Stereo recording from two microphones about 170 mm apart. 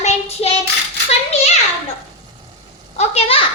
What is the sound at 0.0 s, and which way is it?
Child singing, 40° left (ahead or behind).